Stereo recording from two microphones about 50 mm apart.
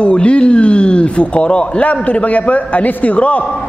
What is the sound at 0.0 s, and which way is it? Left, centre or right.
Speech, left.